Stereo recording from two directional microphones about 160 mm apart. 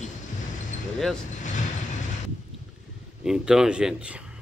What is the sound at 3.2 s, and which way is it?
Speech, 5° right (ahead or behind).